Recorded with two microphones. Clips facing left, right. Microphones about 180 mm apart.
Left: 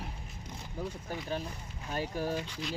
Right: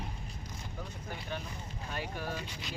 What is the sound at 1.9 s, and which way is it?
Vehicle, 40° left (ahead or behind).